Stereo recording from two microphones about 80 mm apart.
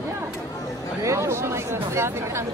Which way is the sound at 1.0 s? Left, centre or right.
Right.